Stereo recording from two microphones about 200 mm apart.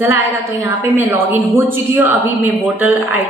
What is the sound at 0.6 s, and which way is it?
A woman's voice, 10° right (ahead or behind).